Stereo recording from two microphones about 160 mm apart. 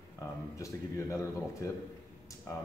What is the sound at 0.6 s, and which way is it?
A man's voice, 20° left (ahead or behind).